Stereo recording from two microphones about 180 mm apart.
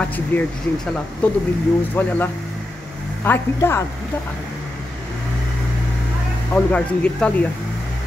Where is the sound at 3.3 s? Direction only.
15° left (ahead or behind).